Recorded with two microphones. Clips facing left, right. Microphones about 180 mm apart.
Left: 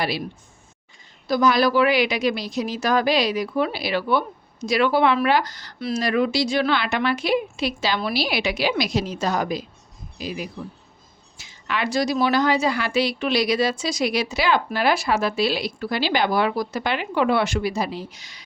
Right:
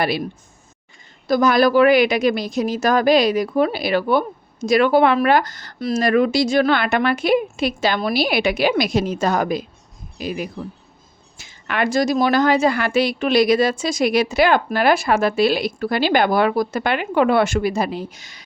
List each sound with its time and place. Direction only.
1.3 s a woman's voice: 50° right (ahead or behind)